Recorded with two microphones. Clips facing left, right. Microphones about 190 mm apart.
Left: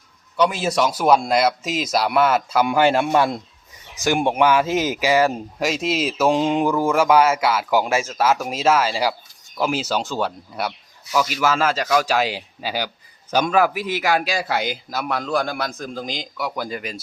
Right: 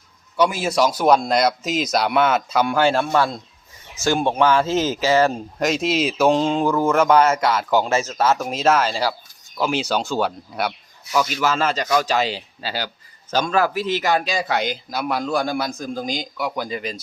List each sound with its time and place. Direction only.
0.3 s a man's voice: centre (ahead or behind)
6.4 s a man's voice: 15° left (ahead or behind)